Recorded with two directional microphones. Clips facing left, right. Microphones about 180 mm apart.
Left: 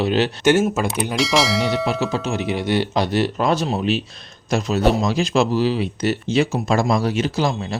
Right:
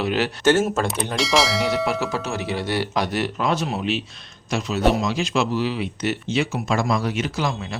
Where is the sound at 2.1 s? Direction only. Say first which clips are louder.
Left 3 dB; 20° left (ahead or behind).